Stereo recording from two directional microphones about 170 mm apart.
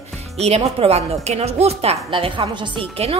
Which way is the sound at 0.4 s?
35° right (ahead or behind).